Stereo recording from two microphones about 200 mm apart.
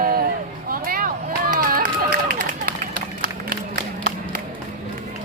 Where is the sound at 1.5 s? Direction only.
45° right (ahead or behind).